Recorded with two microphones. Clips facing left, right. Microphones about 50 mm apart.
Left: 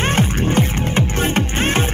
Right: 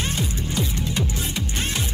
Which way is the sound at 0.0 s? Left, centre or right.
Left.